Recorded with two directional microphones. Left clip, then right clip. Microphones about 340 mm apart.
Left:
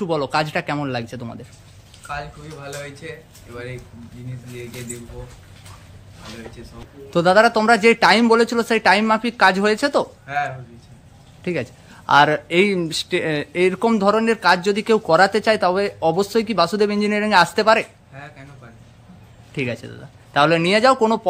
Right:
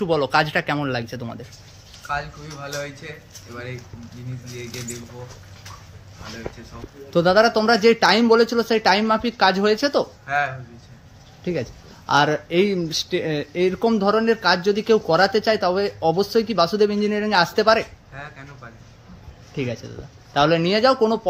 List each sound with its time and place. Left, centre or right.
0.0 s speech: centre
7.1 s speech: centre
12.1 s speech: centre
19.5 s speech: centre